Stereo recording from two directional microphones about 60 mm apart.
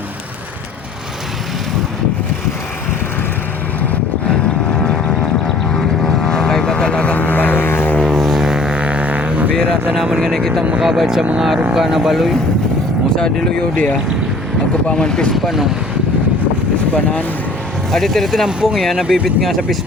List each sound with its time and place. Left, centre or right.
4.7 s vehicle: centre; by 7.9 s left
8.0 s vehicle: centre; by 9.5 s right
10.2 s speech: centre
10.8 s speech: centre
13.1 s speech: centre
15.3 s speech: centre
16.9 s speech: left
17.9 s speech: centre
18.4 s speech: centre
18.8 s speech: centre